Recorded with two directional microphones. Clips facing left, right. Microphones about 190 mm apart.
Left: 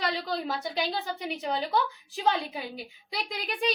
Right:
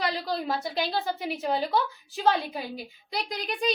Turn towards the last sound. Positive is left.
turn(degrees=0)  # may be behind; listen again after turning